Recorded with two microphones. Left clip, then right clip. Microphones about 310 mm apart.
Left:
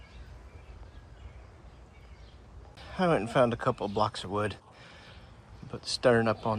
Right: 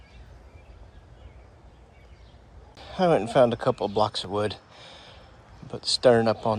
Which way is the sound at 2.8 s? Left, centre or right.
Centre.